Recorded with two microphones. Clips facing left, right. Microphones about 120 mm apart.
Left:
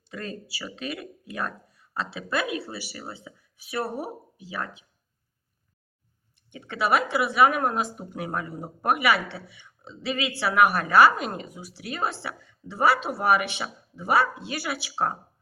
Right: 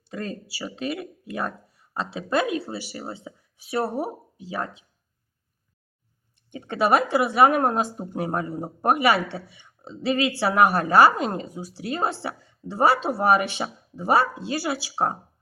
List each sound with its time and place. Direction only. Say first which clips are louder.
0.1 s speech: right 3 dB; 25° right (ahead or behind)
6.5 s a woman's voice: right 3 dB; 40° right (ahead or behind); by 9.5 s 20° right (ahead or behind)
9.9 s a woman's voice: right 6 dB; 35° right (ahead or behind)